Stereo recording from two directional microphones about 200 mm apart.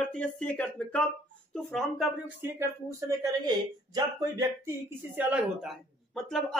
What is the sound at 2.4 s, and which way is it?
Speech, 10° right (ahead or behind).